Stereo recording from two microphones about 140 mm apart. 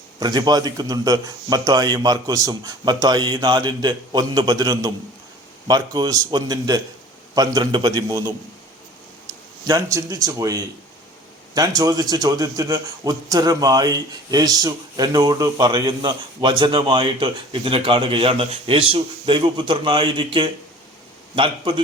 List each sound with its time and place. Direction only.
0.2 s a man's voice: 30° right (ahead or behind)
9.6 s a man's voice: 25° right (ahead or behind)